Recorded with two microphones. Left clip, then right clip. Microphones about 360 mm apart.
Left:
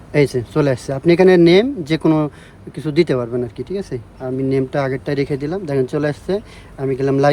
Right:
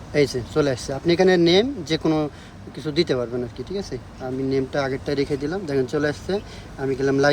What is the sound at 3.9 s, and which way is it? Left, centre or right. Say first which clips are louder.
Speech: left 5 dB; left.